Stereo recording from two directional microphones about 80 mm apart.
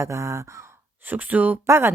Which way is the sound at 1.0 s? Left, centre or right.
Right.